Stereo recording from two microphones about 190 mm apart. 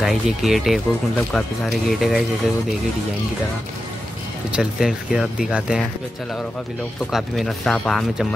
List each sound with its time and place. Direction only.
0.0 s speech: centre (ahead or behind)
4.5 s speech: 5° right (ahead or behind)
7.1 s speech: centre (ahead or behind)